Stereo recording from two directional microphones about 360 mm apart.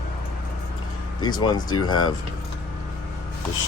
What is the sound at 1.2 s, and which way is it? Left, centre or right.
Speech, centre.